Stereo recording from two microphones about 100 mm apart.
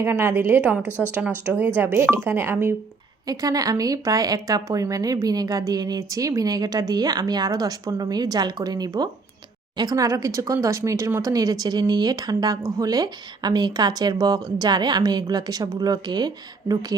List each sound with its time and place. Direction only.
0.0 s speech: 25° right (ahead or behind)
0.9 s speech: 20° left (ahead or behind)
1.5 s speech: 20° right (ahead or behind)
3.2 s a woman's voice: 40° right (ahead or behind)